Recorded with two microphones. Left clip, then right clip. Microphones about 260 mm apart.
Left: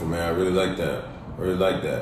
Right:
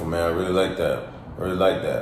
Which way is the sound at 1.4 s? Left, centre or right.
Centre.